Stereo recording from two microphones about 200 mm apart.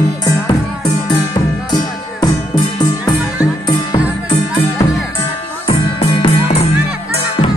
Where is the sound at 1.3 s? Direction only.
20° left (ahead or behind).